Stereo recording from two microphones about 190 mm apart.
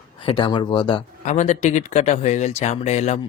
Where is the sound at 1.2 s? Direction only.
40° left (ahead or behind).